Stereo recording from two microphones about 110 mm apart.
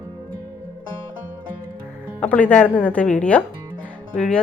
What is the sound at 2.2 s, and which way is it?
Speech, 10° left (ahead or behind).